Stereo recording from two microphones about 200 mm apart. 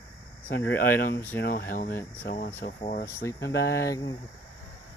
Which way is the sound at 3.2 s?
15° left (ahead or behind).